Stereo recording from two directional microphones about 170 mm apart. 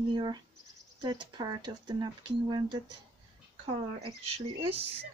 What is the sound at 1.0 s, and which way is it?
A woman's voice, 25° right (ahead or behind).